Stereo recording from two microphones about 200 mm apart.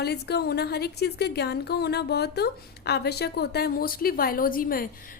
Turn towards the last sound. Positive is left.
turn(degrees=45)  # may be behind; listen again after turning